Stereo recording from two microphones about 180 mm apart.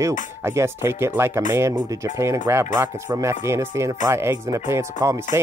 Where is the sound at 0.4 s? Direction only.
15° right (ahead or behind).